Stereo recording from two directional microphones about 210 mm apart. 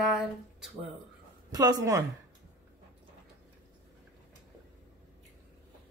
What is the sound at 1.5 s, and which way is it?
Speech, 20° right (ahead or behind).